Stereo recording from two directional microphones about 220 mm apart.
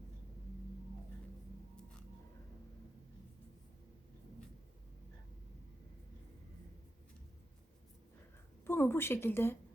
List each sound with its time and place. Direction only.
8.6 s a woman's voice: 10° left (ahead or behind)